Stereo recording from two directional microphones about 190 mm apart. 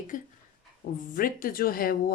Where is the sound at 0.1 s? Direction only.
45° left (ahead or behind).